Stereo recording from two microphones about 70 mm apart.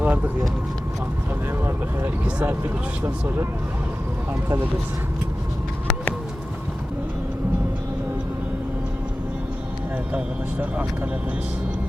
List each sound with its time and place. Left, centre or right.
0.0 s a sound: right
1.6 s speech: right
10.1 s speech: right